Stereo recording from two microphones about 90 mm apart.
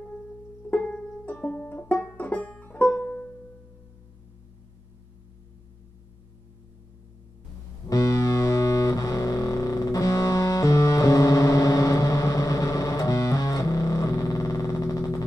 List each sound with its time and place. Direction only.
0.7 s music: 15° left (ahead or behind)
7.9 s music: 35° left (ahead or behind)